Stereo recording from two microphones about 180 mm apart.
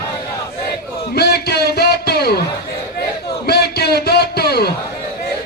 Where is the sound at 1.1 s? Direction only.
65° left (ahead or behind).